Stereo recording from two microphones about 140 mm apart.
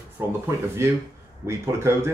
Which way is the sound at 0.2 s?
10° right (ahead or behind).